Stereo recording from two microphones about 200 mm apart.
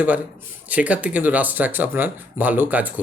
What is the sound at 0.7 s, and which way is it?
A man's voice, 5° right (ahead or behind).